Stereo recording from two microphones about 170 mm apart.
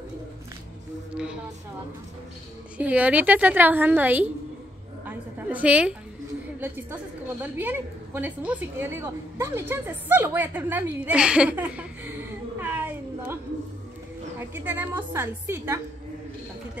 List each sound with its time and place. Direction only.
1.1 s speech: 5° right (ahead or behind)
2.8 s a woman's voice: 10° right (ahead or behind)
5.0 s a sound: 10° right (ahead or behind)
7.4 s a woman's voice: 10° right (ahead or behind)
14.4 s a woman's voice: 10° right (ahead or behind)